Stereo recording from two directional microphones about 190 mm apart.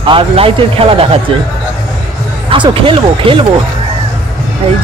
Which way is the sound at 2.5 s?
25° right (ahead or behind).